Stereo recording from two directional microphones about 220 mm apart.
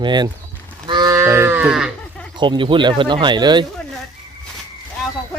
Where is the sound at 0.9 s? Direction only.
20° right (ahead or behind); by 2.2 s centre (ahead or behind).